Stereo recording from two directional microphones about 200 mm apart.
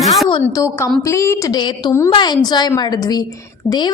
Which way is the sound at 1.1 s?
15° left (ahead or behind).